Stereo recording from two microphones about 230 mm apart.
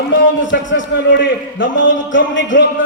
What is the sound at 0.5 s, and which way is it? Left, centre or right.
A man's voice, left.